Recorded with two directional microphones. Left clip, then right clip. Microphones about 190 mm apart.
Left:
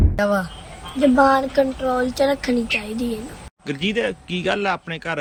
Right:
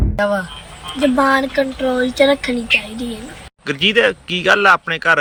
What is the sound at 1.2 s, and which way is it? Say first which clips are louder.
Speech: right 1 dB; 35° left (ahead or behind).